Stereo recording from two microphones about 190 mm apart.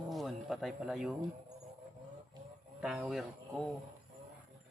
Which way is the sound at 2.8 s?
5° right (ahead or behind).